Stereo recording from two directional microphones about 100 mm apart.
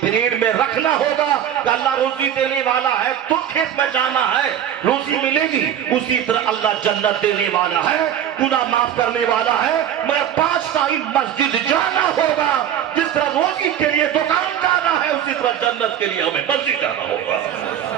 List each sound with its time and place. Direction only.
3.8 s a man's voice: 15° left (ahead or behind)
8.4 s a man's voice: 15° left (ahead or behind)